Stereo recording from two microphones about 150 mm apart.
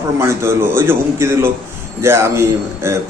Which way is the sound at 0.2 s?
15° right (ahead or behind).